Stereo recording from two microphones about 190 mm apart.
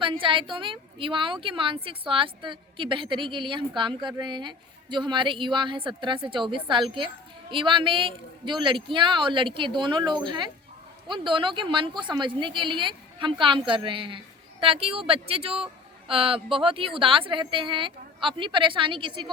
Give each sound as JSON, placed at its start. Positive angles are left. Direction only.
{"t": 0.0, "sound": "a woman's voice", "side_deg": -25}